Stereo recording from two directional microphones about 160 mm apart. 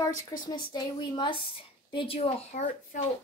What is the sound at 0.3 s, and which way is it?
Speech, 20° left (ahead or behind).